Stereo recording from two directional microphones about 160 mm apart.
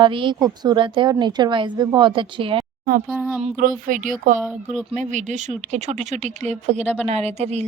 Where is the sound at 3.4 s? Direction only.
55° right (ahead or behind).